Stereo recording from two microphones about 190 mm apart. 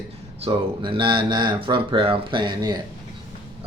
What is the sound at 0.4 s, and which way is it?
Speech, 25° right (ahead or behind).